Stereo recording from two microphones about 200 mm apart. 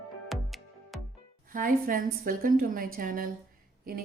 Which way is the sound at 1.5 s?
45° right (ahead or behind).